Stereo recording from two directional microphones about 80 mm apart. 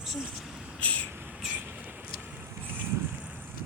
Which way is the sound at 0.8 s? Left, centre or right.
Centre.